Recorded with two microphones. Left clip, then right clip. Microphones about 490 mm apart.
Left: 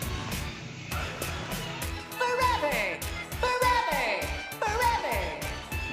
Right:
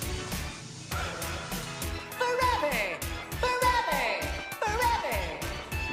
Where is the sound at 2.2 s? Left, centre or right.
Centre.